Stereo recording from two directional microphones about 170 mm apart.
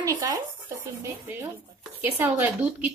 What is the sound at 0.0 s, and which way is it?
Speech, 20° right (ahead or behind).